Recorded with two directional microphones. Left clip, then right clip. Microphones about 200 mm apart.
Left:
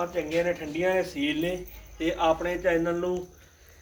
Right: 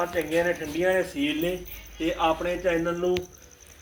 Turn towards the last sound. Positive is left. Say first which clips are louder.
# right 1 dB
turn(degrees=-30)  # may be behind; listen again after turning